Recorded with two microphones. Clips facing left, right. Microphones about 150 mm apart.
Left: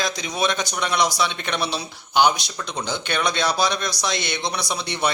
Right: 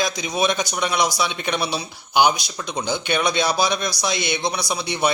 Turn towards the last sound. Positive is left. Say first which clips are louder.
# right 2 dB
turn(degrees=-10)  # may be behind; listen again after turning